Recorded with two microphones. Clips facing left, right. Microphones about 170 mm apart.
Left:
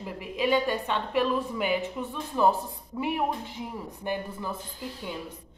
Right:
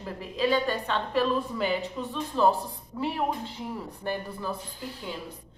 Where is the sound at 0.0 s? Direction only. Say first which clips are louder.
Right 1 dB; 15° left (ahead or behind).